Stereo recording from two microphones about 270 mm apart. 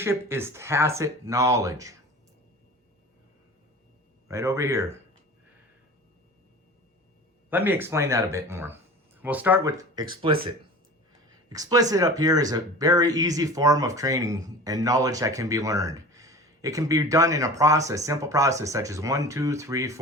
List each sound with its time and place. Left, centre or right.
0.0 s speech: centre
4.3 s speech: centre
7.5 s speech: centre